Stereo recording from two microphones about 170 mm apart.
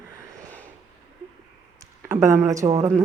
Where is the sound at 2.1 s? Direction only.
15° right (ahead or behind).